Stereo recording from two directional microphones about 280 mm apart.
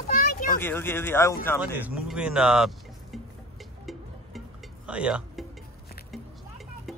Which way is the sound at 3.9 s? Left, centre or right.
Centre.